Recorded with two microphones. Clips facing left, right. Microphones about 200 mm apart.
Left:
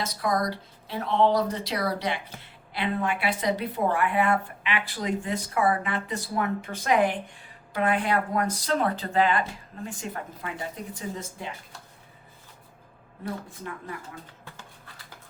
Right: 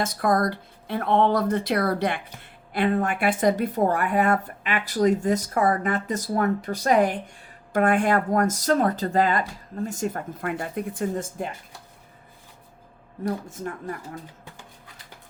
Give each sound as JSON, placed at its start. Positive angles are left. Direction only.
{"t": 0.0, "sound": "speech", "side_deg": -50}
{"t": 13.2, "sound": "speech", "side_deg": -45}